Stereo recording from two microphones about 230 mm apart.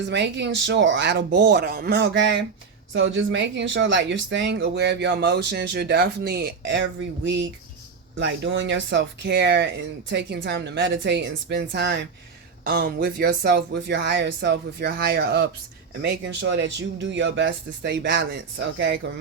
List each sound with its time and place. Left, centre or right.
0.1 s speech: right
8.2 s speech: right